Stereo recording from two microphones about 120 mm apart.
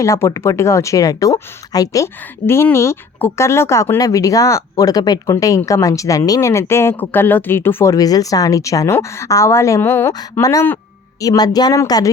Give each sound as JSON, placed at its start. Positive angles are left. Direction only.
{"t": 0.0, "sound": "speech", "side_deg": 25}
{"t": 7.9, "sound": "speech", "side_deg": 30}